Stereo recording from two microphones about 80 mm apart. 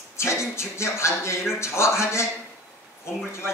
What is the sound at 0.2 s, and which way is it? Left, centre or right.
A man's voice, left.